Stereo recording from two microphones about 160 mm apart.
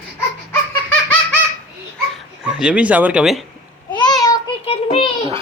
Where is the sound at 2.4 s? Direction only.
5° right (ahead or behind).